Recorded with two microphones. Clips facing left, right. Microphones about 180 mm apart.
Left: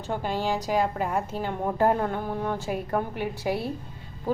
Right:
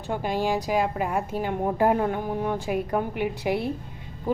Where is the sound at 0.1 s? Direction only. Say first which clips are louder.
Right 2 dB; 10° right (ahead or behind).